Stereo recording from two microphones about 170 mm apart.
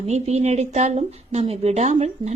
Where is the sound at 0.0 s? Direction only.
40° right (ahead or behind).